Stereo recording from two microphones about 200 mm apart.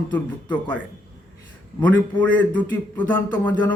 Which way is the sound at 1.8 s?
5° left (ahead or behind).